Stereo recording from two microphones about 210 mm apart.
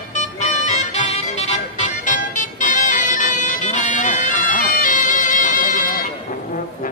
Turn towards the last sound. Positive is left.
turn(degrees=40)  # may be behind; listen again after turning